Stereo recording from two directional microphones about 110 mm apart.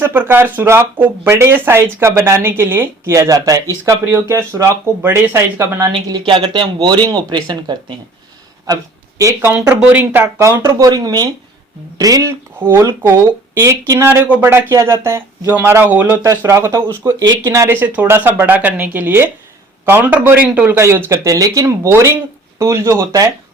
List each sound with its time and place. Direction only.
0.0 s speech: 20° right (ahead or behind)
4.1 s speech: 20° right (ahead or behind)
5.8 s speech: 35° right (ahead or behind)
6.2 s speech: 50° right (ahead or behind)
9.8 s speech: 15° right (ahead or behind)
10.6 s speech: 35° right (ahead or behind)
12.5 s speech: 20° right (ahead or behind)
14.1 s speech: 20° right (ahead or behind)
16.2 s speech: 30° right (ahead or behind)
17.7 s speech: 15° right (ahead or behind)
20.7 s speech: 25° right (ahead or behind)